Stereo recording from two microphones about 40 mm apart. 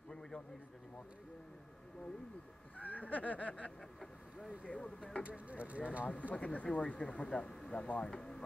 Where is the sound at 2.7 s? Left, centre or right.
Left.